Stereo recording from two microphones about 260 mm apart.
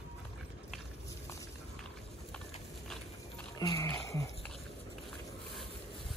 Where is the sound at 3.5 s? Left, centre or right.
Centre.